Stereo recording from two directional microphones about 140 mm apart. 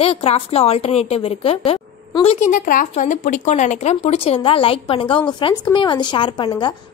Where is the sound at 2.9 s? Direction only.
60° left (ahead or behind).